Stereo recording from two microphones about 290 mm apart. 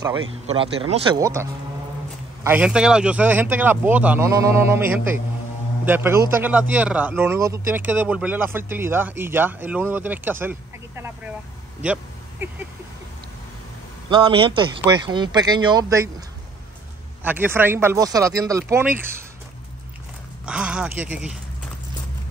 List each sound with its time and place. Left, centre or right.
0.3 s a man's voice: centre
11.8 s a sound: centre
14.0 s a man's voice: centre
17.2 s a man's voice: centre
20.4 s speech: centre